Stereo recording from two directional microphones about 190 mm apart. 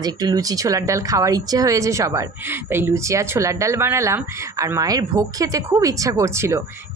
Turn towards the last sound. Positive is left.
turn(degrees=-15)  # may be behind; listen again after turning